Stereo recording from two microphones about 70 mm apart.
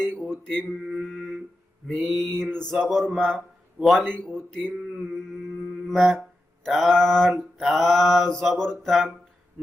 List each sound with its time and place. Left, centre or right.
0.1 s mantra: right
0.8 s mantra: centre
1.0 s a sound: centre
1.9 s mantra: centre
2.4 s a sound: centre
4.7 s mantra: centre
5.9 s mantra: centre